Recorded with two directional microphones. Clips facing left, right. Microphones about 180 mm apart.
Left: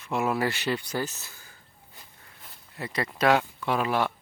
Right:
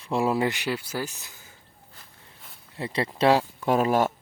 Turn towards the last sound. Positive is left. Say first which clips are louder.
# right 4 dB
turn(degrees=-45)  # may be behind; listen again after turning